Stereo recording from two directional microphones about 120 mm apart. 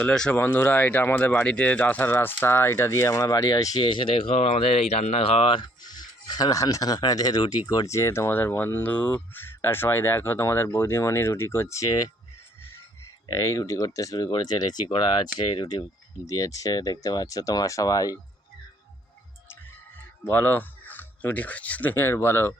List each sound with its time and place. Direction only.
0.0 s speech: 10° left (ahead or behind); by 3.8 s 30° left (ahead or behind)
3.8 s speech: 45° left (ahead or behind)
13.2 s speech: 25° left (ahead or behind)
20.2 s speech: 15° left (ahead or behind)